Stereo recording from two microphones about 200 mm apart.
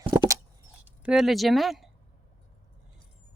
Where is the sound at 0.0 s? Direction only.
15° right (ahead or behind).